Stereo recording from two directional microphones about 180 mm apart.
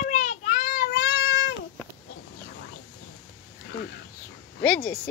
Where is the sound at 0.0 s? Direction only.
45° left (ahead or behind); by 1.5 s 70° left (ahead or behind).